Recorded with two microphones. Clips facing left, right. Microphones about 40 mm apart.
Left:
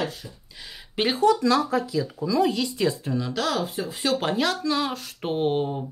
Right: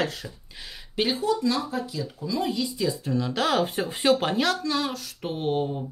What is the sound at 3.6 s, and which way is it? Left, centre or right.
Speech, right.